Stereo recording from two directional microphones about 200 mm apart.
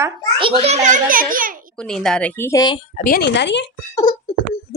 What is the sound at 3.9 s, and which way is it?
Beatboxing, 20° left (ahead or behind).